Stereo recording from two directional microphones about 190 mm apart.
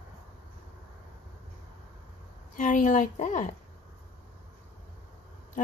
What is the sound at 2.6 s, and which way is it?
Speech, 40° left (ahead or behind).